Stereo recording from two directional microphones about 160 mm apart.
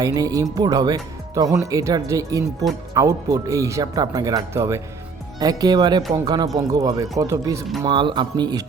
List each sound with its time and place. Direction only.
0.0 s speech: 20° right (ahead or behind)